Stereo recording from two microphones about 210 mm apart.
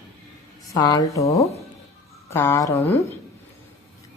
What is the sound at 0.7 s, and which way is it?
A woman's voice, 20° left (ahead or behind).